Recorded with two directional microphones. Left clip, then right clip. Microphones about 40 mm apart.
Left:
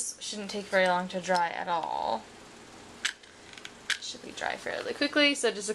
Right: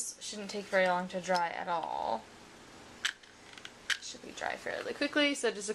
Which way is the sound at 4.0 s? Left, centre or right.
Right.